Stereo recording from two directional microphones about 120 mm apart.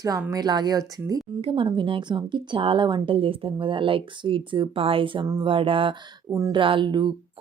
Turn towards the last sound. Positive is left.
turn(degrees=-40)  # may be behind; listen again after turning